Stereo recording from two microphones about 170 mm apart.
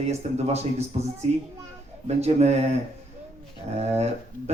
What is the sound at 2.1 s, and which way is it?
Speech, 40° right (ahead or behind).